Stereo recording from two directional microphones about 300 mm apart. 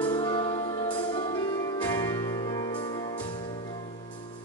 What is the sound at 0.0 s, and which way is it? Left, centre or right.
Music, centre.